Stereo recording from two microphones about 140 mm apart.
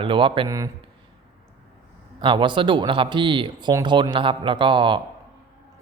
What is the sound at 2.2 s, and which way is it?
Speech, 35° right (ahead or behind).